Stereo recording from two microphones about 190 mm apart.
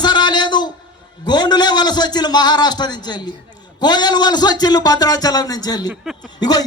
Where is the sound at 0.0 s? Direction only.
20° left (ahead or behind).